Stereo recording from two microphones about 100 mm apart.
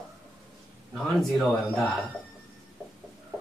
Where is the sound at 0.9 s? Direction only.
5° left (ahead or behind).